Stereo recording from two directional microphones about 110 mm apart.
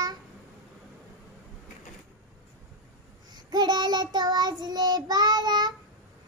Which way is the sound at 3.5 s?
40° right (ahead or behind).